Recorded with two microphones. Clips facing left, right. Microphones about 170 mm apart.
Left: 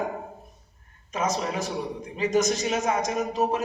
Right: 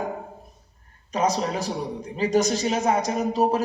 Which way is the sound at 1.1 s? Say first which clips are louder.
Right 4 dB; 35° right (ahead or behind).